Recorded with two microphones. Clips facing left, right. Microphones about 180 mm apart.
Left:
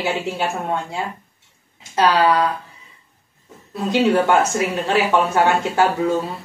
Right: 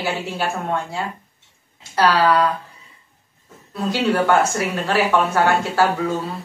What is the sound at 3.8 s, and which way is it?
Speech, 20° left (ahead or behind).